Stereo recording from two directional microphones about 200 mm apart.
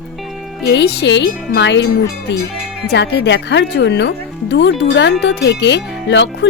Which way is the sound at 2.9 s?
60° left (ahead or behind).